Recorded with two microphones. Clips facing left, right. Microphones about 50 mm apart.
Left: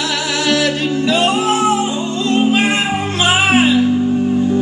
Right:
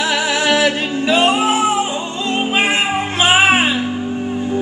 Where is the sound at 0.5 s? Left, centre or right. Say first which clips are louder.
Left 2 dB; centre.